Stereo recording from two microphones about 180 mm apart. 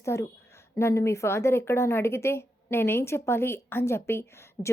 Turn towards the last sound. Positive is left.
turn(degrees=15)  # may be behind; listen again after turning